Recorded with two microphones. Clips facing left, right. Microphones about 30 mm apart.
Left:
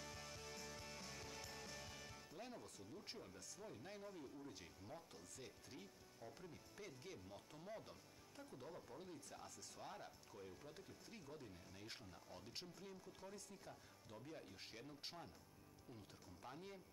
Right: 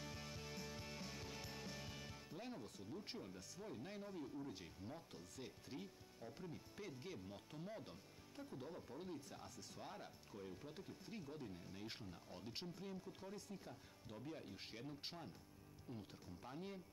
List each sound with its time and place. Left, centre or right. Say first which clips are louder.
0.0 s music: right 2 dB; centre
16.5 s speech: right 7 dB; centre